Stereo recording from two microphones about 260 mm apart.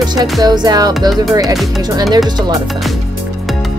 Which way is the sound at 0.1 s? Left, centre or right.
Centre.